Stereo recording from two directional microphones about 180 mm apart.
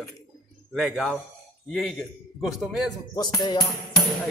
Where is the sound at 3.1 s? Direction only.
20° left (ahead or behind).